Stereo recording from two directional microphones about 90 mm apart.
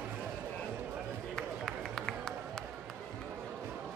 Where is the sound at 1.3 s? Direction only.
5° left (ahead or behind).